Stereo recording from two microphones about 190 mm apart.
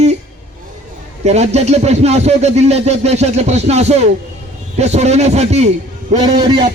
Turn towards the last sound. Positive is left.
turn(degrees=-25)  # may be behind; listen again after turning